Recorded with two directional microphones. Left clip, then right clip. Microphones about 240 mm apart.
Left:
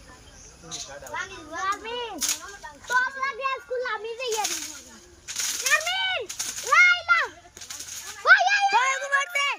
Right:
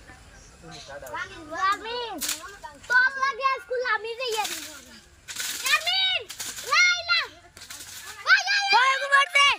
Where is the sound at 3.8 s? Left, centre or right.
Centre.